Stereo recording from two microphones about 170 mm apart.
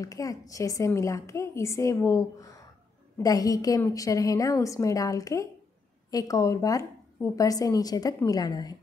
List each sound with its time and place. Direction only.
0.0 s a woman's voice: 20° left (ahead or behind)